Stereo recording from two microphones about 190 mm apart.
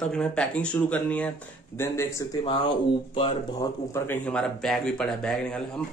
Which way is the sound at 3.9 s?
10° left (ahead or behind).